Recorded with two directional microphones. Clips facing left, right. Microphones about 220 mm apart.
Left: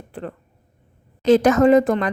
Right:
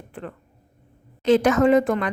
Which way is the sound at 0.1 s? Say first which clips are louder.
Left 4 dB; 35° left (ahead or behind).